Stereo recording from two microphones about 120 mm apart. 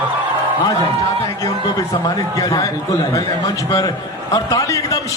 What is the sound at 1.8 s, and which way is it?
A man's voice, 30° left (ahead or behind).